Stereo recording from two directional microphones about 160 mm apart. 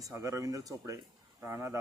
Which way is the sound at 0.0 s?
20° right (ahead or behind).